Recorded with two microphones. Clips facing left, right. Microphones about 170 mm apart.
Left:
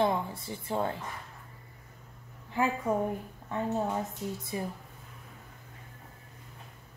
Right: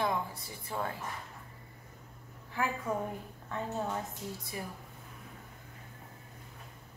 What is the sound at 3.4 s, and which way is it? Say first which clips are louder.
A woman's voice: left 5 dB; 20° left (ahead or behind).